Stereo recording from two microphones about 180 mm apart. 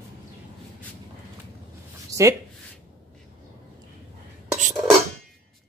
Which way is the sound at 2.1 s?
15° right (ahead or behind).